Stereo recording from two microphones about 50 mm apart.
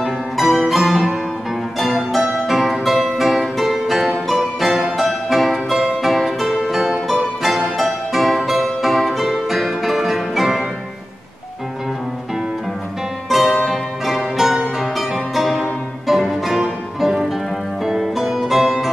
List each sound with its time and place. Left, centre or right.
0.0 s music: centre
13.3 s music: centre